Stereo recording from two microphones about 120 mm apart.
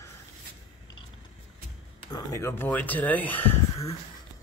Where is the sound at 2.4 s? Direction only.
20° left (ahead or behind).